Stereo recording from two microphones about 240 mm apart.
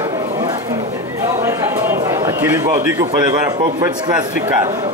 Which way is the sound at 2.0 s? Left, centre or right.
Centre.